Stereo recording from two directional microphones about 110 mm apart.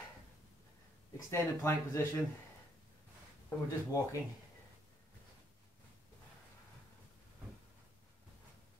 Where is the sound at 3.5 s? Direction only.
25° left (ahead or behind).